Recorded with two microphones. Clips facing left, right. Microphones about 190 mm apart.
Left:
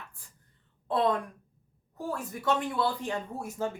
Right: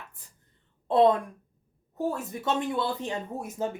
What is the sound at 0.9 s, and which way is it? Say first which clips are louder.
A woman's voice: right 6 dB; 25° right (ahead or behind).